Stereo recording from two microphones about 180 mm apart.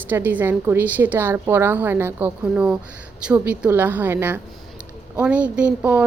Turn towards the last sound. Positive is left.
turn(degrees=-10)  # may be behind; listen again after turning